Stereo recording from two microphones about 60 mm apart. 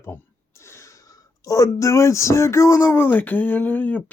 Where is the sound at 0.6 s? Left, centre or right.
Left.